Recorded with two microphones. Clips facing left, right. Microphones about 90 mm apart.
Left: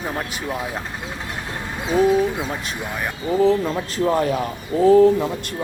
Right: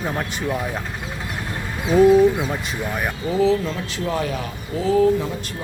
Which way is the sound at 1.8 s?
Centre (ahead or behind).